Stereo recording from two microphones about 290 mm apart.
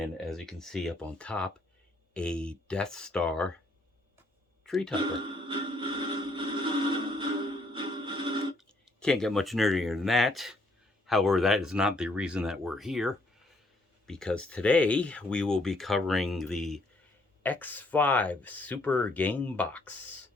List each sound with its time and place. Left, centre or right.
0.0 s speech: centre
4.6 s speech: centre
5.5 s a sound: centre
8.5 s speech: centre